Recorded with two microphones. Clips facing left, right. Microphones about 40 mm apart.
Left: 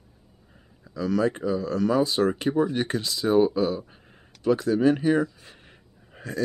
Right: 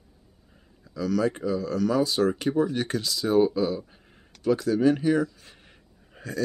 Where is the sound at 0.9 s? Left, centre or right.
Left.